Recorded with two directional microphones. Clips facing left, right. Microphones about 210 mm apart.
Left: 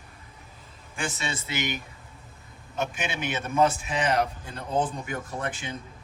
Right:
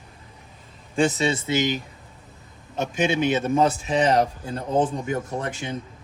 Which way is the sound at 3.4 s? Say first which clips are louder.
Right 3 dB; 35° right (ahead or behind).